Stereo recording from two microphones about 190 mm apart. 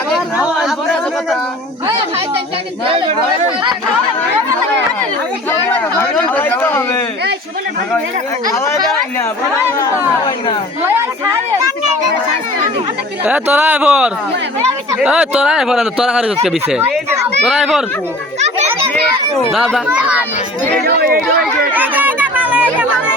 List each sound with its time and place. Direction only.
0.1 s a sound: centre (ahead or behind)
5.5 s a sound: 10° left (ahead or behind)
9.8 s speech: 25° left (ahead or behind)
13.2 s a man's voice: 10° right (ahead or behind)
19.4 s a man's voice: centre (ahead or behind)
21.7 s chatter: 10° right (ahead or behind)